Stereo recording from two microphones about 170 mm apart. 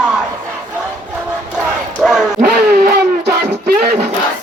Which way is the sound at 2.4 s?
70° right (ahead or behind).